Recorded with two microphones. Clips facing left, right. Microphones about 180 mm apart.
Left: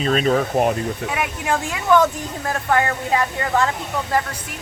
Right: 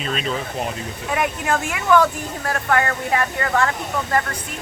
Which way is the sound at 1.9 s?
20° left (ahead or behind).